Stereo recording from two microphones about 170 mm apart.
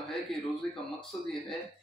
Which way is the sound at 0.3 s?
Centre (ahead or behind).